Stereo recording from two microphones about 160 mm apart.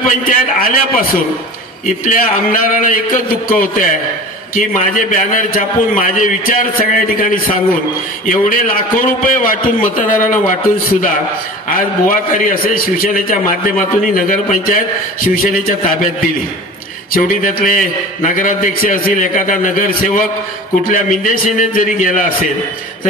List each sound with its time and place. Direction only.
0.0 s a man's voice: 60° left (ahead or behind)